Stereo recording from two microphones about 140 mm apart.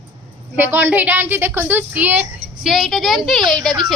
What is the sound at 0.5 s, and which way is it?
A woman's voice, 15° right (ahead or behind).